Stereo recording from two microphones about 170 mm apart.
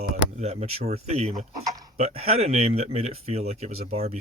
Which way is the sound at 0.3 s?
40° right (ahead or behind).